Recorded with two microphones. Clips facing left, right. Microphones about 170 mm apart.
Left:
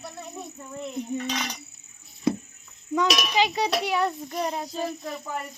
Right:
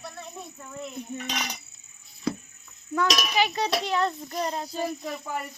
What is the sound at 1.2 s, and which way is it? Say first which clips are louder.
Speech: left 3 dB; 10° right (ahead or behind).